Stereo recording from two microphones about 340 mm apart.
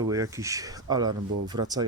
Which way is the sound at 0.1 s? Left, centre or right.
Centre.